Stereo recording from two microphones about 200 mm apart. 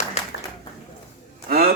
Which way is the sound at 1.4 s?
50° right (ahead or behind).